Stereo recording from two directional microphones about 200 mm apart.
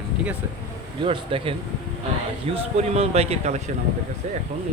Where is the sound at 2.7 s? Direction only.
30° right (ahead or behind).